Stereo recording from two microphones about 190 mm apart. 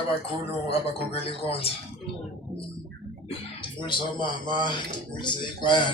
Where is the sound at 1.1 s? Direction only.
30° left (ahead or behind).